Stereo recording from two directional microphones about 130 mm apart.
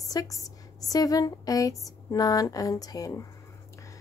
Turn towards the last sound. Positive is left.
turn(degrees=25)  # may be behind; listen again after turning